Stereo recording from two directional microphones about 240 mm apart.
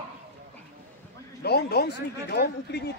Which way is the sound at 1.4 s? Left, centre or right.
Left.